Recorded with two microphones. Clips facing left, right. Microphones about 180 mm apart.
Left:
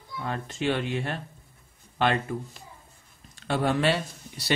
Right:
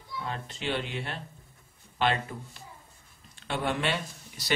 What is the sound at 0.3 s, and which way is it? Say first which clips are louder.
Speech: left 5 dB; 50° left (ahead or behind).